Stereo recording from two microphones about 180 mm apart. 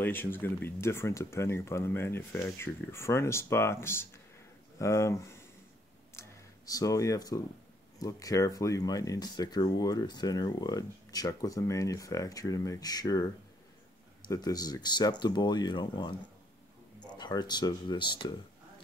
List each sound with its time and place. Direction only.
0.0 s speech: 10° left (ahead or behind)
6.1 s a sound: 20° left (ahead or behind)
8.0 s speech: 20° left (ahead or behind)
17.2 s speech: 25° left (ahead or behind)